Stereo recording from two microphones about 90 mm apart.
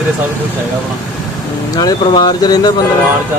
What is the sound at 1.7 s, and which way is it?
Speech, 50° left (ahead or behind).